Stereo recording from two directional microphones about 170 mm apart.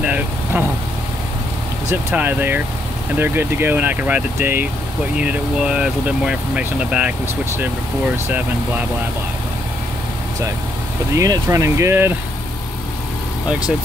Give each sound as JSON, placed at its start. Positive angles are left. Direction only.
{"t": 0.0, "sound": "vehicle", "side_deg": -10}
{"t": 1.9, "sound": "speech", "side_deg": -15}
{"t": 11.1, "sound": "speech", "side_deg": -20}